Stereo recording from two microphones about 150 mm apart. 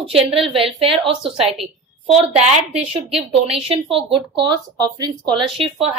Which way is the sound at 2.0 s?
40° right (ahead or behind).